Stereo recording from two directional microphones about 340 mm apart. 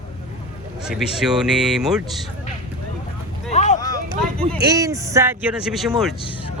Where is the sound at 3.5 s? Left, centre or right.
Left.